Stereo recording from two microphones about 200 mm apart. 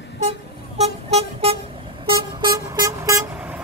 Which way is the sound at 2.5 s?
15° right (ahead or behind).